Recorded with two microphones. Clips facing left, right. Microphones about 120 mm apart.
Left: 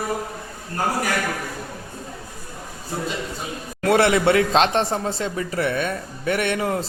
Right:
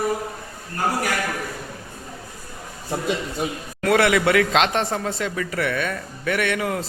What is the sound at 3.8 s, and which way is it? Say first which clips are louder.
Speech: left 1 dB; 30° left (ahead or behind).